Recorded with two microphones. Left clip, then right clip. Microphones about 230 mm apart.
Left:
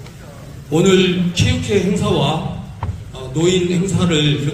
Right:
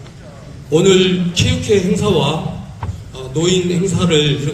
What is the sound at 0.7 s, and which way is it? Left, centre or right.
Speech, right.